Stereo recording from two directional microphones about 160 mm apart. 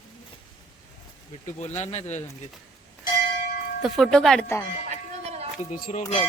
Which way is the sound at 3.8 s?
Centre (ahead or behind).